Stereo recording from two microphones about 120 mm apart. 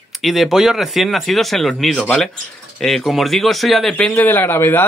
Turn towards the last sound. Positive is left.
turn(degrees=20)  # may be behind; listen again after turning